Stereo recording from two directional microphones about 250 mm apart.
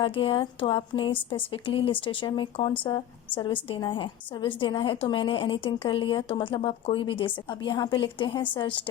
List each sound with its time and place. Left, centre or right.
0.0 s a woman's voice: left